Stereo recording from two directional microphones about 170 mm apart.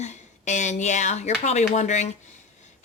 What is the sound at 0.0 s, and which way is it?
A woman's voice, 45° left (ahead or behind).